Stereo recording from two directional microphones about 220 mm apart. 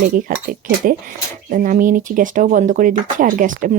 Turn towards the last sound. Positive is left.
turn(degrees=-35)  # may be behind; listen again after turning